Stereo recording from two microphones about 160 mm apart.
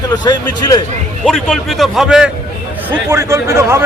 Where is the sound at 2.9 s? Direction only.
15° right (ahead or behind).